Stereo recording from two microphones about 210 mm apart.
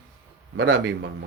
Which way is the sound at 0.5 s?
65° right (ahead or behind).